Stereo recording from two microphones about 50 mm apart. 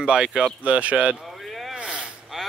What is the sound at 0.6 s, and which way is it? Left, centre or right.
Speech, right.